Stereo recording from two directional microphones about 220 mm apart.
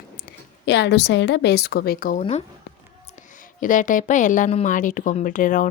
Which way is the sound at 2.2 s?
30° left (ahead or behind).